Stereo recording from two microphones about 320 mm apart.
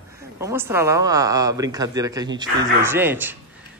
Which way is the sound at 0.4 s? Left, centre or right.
Centre.